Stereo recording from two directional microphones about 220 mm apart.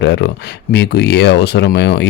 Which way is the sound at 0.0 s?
55° left (ahead or behind).